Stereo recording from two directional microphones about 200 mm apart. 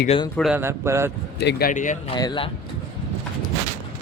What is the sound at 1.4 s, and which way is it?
Speech, 55° left (ahead or behind).